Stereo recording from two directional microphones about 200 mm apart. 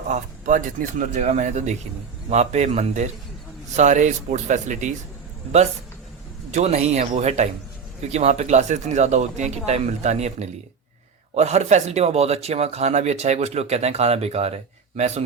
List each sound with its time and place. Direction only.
0.1 s speech: 40° right (ahead or behind)
6.5 s speech: 35° right (ahead or behind)